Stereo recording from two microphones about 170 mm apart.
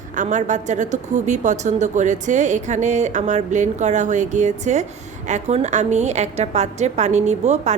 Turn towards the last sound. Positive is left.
turn(degrees=-40)  # may be behind; listen again after turning